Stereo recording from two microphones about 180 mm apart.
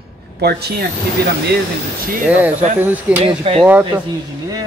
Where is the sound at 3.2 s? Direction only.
30° right (ahead or behind).